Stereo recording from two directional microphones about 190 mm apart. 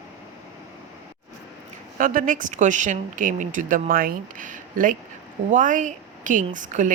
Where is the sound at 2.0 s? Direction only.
45° right (ahead or behind).